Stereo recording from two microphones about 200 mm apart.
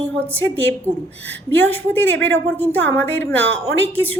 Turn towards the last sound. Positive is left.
turn(degrees=10)  # may be behind; listen again after turning